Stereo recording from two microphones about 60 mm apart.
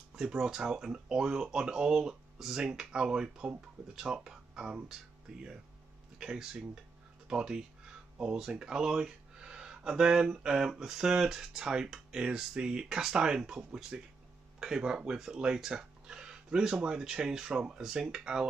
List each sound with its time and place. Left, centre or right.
0.1 s speech: centre
6.1 s speech: centre